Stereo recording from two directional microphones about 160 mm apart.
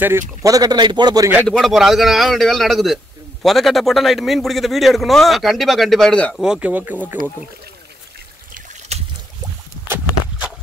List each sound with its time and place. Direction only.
0.4 s a man's voice: 20° right (ahead or behind)
1.4 s a man's voice: 5° left (ahead or behind)
6.4 s speech: 5° right (ahead or behind)
8.5 s a sound: 40° right (ahead or behind)